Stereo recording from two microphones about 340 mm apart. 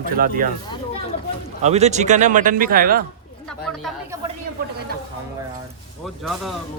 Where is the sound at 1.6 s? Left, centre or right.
Centre.